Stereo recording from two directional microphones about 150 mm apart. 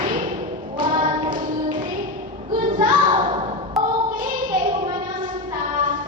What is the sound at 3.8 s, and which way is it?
Child singing, centre (ahead or behind).